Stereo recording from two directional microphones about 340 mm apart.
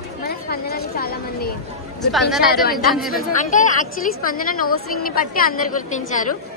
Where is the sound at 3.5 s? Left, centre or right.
Left.